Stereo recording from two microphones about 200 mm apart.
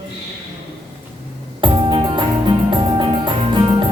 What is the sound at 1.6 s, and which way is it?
Music, 25° right (ahead or behind).